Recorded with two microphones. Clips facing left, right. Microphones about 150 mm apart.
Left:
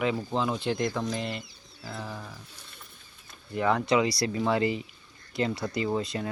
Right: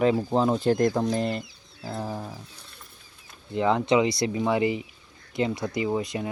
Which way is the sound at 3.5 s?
20° right (ahead or behind).